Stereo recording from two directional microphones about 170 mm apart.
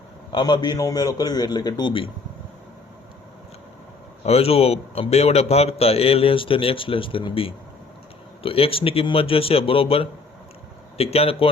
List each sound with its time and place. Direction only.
0.3 s a man's voice: 25° left (ahead or behind)
4.2 s a man's voice: 35° left (ahead or behind)